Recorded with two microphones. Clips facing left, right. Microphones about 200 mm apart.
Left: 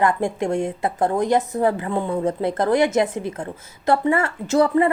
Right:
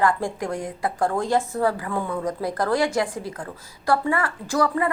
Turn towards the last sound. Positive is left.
turn(degrees=25)  # may be behind; listen again after turning